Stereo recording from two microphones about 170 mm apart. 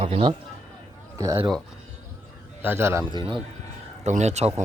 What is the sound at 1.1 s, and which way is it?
Speech, 15° right (ahead or behind).